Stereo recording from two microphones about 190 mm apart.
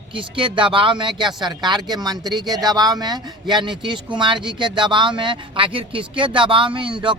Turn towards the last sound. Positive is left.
turn(degrees=-25)  # may be behind; listen again after turning